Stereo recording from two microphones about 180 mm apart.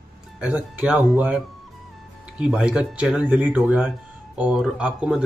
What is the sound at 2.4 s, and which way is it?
Speech, 5° right (ahead or behind).